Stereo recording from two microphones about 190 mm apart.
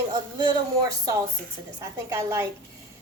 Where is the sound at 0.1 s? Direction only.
20° right (ahead or behind).